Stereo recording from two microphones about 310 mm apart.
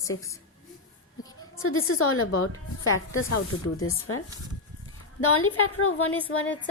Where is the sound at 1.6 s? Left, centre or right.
Left.